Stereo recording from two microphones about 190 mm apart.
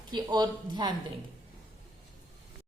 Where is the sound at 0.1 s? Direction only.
20° right (ahead or behind).